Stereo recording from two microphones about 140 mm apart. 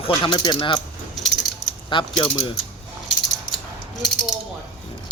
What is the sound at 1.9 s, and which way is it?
Speech, 35° left (ahead or behind).